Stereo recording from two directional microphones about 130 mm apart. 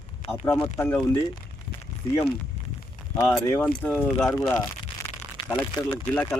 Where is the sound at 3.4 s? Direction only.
15° left (ahead or behind).